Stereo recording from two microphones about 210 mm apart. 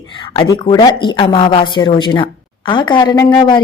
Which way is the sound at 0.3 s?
20° left (ahead or behind).